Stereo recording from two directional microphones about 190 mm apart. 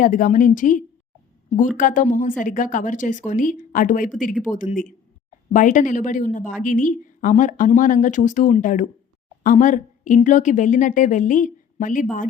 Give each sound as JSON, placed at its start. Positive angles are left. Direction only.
{"t": 0.0, "sound": "a woman's voice", "side_deg": 45}